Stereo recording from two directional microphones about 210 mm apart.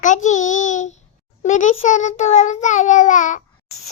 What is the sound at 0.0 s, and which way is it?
A child's voice, 35° left (ahead or behind).